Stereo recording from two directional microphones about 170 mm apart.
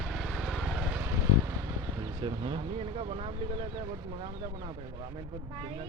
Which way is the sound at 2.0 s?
30° right (ahead or behind).